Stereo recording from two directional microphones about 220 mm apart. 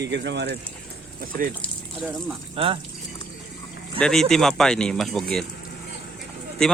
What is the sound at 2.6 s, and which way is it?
Speech, 25° right (ahead or behind).